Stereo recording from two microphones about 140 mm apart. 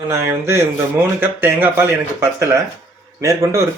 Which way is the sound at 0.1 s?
20° right (ahead or behind).